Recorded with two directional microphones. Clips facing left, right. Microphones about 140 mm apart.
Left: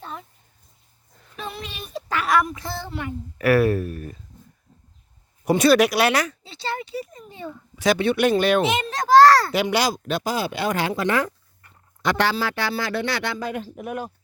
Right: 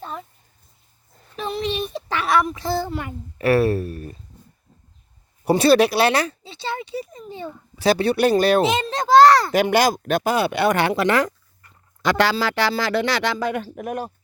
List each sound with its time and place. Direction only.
1.5 s child singing: 20° right (ahead or behind)
3.3 s speech: 30° right (ahead or behind)
5.5 s speech: 30° right (ahead or behind)
9.5 s speech: 50° right (ahead or behind); by 11.3 s 80° right
12.0 s speech: 90° right; by 13.8 s 75° right (ahead or behind)
13.8 s speech: 40° right (ahead or behind)